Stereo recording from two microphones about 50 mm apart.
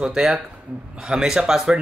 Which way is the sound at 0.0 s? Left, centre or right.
Centre.